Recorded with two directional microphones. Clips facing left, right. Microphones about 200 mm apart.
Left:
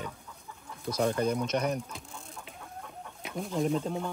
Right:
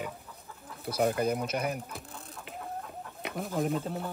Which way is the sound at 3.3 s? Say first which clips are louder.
Left 1 dB; centre (ahead or behind).